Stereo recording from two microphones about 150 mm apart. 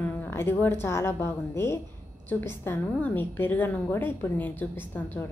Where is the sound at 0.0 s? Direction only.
15° left (ahead or behind).